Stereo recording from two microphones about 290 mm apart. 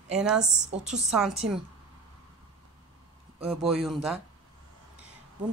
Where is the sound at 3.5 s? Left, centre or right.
Centre.